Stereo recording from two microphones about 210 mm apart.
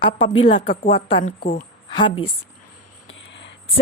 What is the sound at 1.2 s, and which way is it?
Speech, 40° left (ahead or behind).